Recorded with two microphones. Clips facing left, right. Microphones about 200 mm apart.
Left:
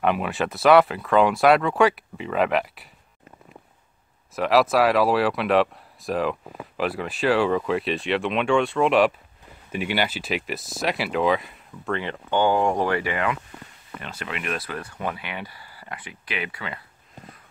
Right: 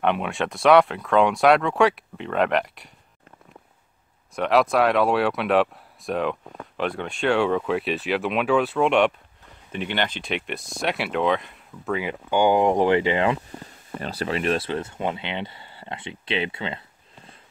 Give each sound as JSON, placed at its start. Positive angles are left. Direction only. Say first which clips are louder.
{"t": 0.0, "sound": "speech", "louder": "even", "side_deg": 0}
{"t": 4.4, "sound": "speech", "louder": "left 1 dB", "side_deg": 0}